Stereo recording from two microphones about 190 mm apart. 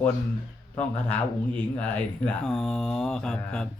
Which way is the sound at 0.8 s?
10° left (ahead or behind).